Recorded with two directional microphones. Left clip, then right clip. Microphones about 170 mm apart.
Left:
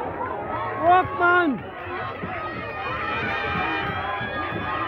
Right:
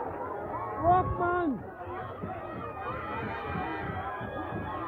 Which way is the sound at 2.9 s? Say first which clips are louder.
Left 11 dB; 55° right (ahead or behind).